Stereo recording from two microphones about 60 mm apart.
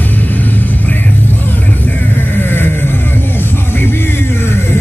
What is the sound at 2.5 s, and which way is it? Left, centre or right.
Music, left.